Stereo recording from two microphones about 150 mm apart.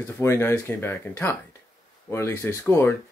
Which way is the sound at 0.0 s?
20° left (ahead or behind).